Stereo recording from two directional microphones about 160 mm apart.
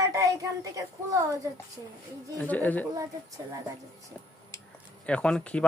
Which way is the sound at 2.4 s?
10° left (ahead or behind).